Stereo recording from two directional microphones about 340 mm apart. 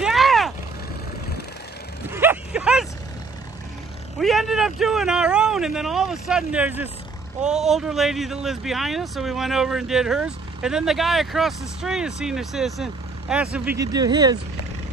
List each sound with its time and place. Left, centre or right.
0.0 s vehicle: centre
2.0 s a sound: centre
4.2 s speech: centre